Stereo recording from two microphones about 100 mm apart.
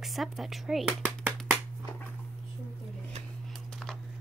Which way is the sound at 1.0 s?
15° right (ahead or behind).